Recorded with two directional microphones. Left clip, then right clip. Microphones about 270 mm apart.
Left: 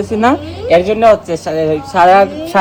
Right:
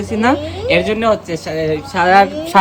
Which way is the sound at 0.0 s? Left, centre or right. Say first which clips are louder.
Left 3 dB; centre.